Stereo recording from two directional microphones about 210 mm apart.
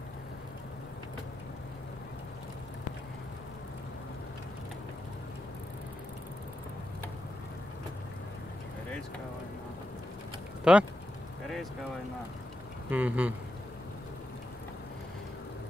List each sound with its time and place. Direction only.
10.6 s speech: 5° right (ahead or behind)
12.9 s speech: 10° right (ahead or behind)